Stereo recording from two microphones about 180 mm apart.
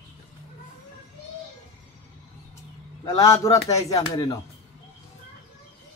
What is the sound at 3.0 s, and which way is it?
Speech, 20° left (ahead or behind).